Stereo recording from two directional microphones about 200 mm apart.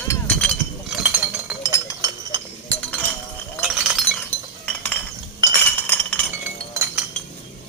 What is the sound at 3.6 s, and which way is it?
Chink, 5° right (ahead or behind).